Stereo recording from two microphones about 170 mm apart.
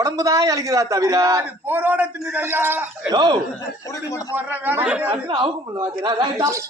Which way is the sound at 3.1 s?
25° right (ahead or behind).